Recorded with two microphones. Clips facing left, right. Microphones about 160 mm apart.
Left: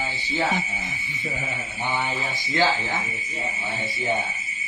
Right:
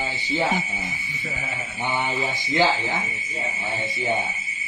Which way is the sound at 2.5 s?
20° right (ahead or behind).